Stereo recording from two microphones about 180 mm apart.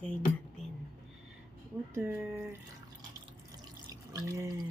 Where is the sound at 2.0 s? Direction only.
10° right (ahead or behind).